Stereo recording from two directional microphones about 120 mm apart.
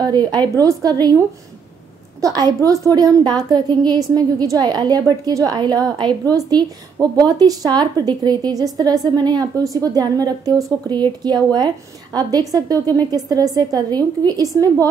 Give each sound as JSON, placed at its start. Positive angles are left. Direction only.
{"t": 0.0, "sound": "a woman's voice", "side_deg": -35}
{"t": 2.2, "sound": "a woman's voice", "side_deg": -30}